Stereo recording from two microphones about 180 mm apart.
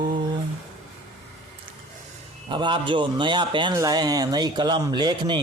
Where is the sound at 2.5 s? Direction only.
25° right (ahead or behind).